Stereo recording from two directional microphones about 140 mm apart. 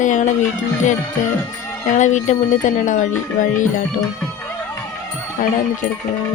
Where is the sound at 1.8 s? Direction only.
60° left (ahead or behind).